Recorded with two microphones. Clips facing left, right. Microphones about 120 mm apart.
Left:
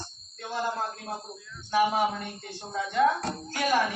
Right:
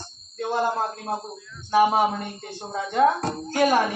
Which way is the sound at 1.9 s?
30° right (ahead or behind).